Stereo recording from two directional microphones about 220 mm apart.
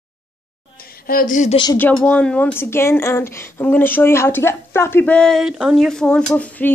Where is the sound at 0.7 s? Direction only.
40° left (ahead or behind).